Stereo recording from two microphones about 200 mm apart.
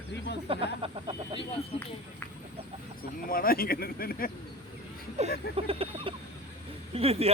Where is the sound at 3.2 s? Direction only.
45° left (ahead or behind).